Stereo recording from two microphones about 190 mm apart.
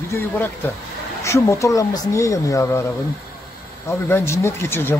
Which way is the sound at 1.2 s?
15° left (ahead or behind).